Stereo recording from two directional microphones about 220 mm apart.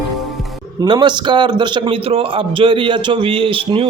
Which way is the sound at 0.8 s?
20° right (ahead or behind).